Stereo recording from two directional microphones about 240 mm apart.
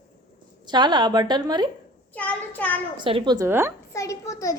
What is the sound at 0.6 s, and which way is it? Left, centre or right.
A woman's voice, centre.